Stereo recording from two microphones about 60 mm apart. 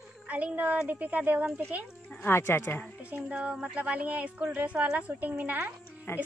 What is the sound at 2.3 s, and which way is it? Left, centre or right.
Speech, left.